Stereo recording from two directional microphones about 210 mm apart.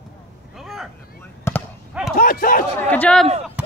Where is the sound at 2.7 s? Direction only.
5° left (ahead or behind).